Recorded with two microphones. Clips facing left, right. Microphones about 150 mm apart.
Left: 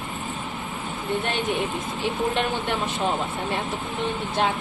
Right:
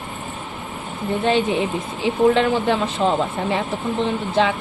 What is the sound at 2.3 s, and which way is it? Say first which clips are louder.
Speech: right 8 dB; 90° right.